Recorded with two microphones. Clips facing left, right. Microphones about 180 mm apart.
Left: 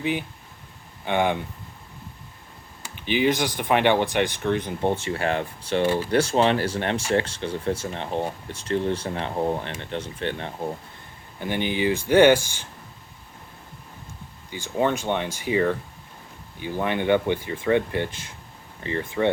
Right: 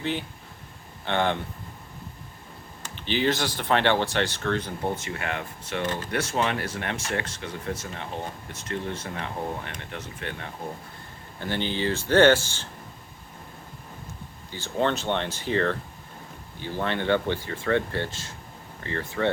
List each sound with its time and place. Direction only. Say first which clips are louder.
0.0 s speech: left 3 dB; 10° left (ahead or behind)
2.8 s speech: left 3 dB; 10° left (ahead or behind); by 5.8 s 30° left (ahead or behind)
5.8 s speech: left 7 dB; 10° left (ahead or behind)
6.1 s speech: left 5 dB; 30° left (ahead or behind)
11.3 s speech: left 3 dB; 15° left (ahead or behind)
14.5 s speech: left 2 dB; 10° left (ahead or behind)